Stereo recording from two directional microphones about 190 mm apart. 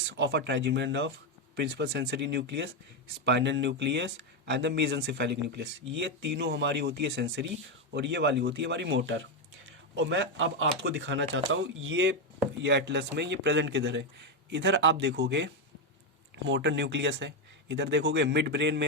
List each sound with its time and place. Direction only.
0.2 s a man's voice: 65° right (ahead or behind)
9.6 s speech: 90° right
10.8 s a man's voice: 70° right (ahead or behind)
12.6 s a man's voice: 65° right (ahead or behind)
16.5 s a man's voice: 65° right (ahead or behind)